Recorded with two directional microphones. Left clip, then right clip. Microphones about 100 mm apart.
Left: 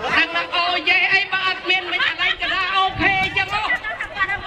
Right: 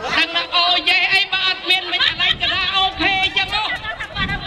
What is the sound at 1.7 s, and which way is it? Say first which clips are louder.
Chatter: right 2 dB; 40° right (ahead or behind).